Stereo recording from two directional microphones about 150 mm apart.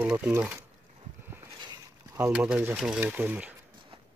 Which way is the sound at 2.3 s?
10° right (ahead or behind).